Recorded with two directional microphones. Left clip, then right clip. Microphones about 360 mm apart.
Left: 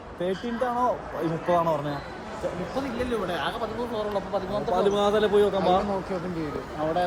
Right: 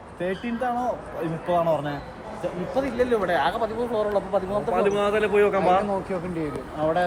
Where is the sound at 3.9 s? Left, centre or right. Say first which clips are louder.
Right 5 dB; right.